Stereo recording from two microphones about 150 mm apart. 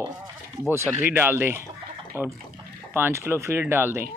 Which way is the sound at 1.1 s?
15° right (ahead or behind).